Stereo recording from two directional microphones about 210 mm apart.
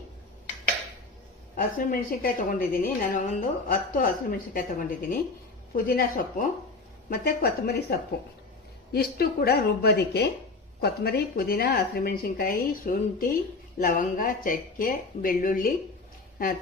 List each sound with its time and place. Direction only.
1.5 s a woman's voice: 40° left (ahead or behind)